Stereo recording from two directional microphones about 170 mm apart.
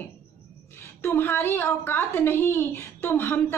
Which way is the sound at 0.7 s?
15° left (ahead or behind).